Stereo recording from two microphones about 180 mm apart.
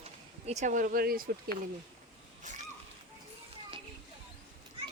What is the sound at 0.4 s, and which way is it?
Speech, 40° right (ahead or behind).